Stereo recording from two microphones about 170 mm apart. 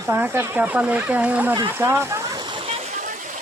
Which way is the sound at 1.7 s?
15° right (ahead or behind).